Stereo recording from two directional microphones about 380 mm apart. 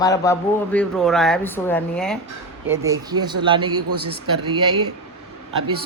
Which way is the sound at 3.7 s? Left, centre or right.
Right.